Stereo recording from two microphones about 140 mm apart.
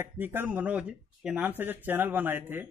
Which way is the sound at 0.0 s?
15° right (ahead or behind).